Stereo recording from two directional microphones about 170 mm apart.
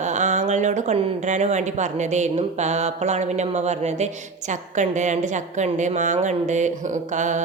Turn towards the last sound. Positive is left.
turn(degrees=-45)  # may be behind; listen again after turning